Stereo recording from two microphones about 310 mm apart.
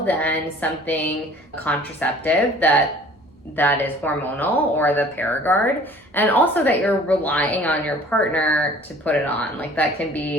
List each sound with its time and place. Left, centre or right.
0.0 s a woman's voice: centre